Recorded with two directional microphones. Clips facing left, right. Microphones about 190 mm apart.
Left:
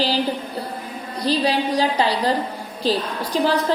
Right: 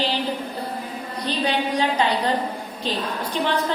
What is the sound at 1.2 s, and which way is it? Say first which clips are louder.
A woman's voice: left 4 dB; 35° left (ahead or behind).